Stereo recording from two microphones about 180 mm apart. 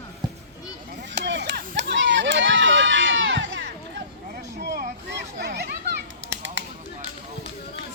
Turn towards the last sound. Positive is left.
turn(degrees=-90)